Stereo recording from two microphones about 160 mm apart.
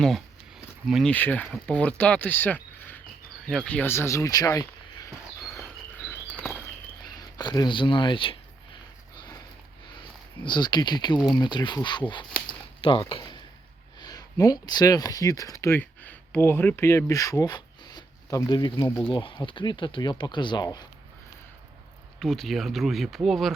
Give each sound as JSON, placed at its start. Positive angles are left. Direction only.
{"t": 0.9, "sound": "speech", "side_deg": 0}
{"t": 1.1, "sound": "speech", "side_deg": 10}
{"t": 7.0, "sound": "speech", "side_deg": 25}
{"t": 10.4, "sound": "speech", "side_deg": 25}
{"t": 22.2, "sound": "speech", "side_deg": 0}